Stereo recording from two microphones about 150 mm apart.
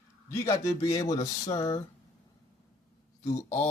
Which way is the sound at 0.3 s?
20° left (ahead or behind).